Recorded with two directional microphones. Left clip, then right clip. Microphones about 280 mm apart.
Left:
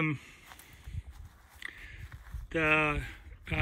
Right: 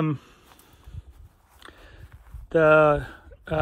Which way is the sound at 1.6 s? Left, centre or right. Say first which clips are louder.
Left 3 dB; centre.